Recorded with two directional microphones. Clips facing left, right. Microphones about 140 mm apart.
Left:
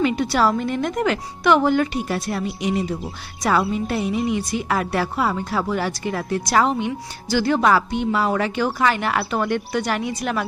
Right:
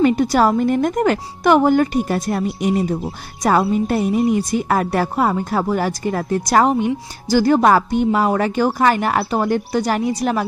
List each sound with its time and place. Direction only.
0.0 s a woman's voice: 45° right (ahead or behind)